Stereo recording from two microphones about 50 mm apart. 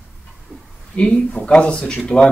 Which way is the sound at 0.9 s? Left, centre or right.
Centre.